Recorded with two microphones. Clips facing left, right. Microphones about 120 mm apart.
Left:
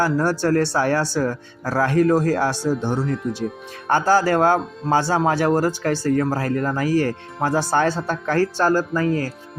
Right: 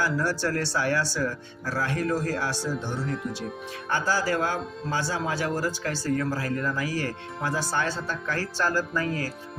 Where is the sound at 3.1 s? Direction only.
Centre (ahead or behind).